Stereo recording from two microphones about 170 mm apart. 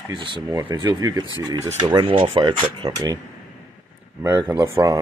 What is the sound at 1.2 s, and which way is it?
Speech, 20° left (ahead or behind).